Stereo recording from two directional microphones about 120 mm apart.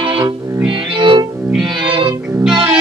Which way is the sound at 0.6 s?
5° right (ahead or behind).